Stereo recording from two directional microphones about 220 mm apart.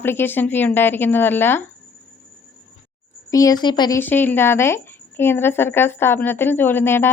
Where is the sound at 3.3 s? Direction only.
15° left (ahead or behind).